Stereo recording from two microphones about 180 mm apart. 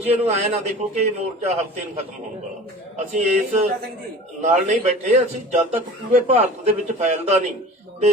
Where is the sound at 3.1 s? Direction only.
40° right (ahead or behind).